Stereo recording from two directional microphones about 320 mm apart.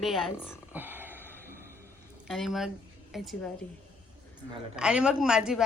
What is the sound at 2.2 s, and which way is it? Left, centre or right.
A woman's voice, centre.